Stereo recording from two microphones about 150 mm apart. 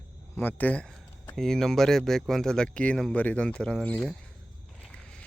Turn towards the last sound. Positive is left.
turn(degrees=5)  # may be behind; listen again after turning